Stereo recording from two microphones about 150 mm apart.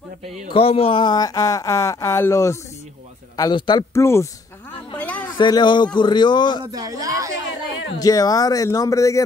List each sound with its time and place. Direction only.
0.5 s speech: 40° left (ahead or behind)
3.9 s speech: 20° left (ahead or behind)
4.9 s a sound: 10° left (ahead or behind)
5.4 s a man's voice: 30° left (ahead or behind)
6.6 s speech: 25° right (ahead or behind)
8.0 s speech: 25° left (ahead or behind)